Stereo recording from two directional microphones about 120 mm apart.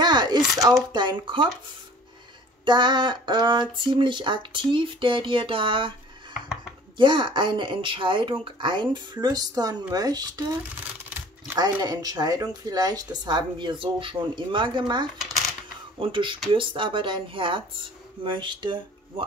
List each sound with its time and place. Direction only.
0.0 s a sound: 35° right (ahead or behind)
0.9 s speech: 40° right (ahead or behind)
2.6 s speech: 40° right (ahead or behind)
7.0 s speech: 40° right (ahead or behind)
11.1 s a sound: 15° right (ahead or behind)
11.5 s speech: 35° right (ahead or behind)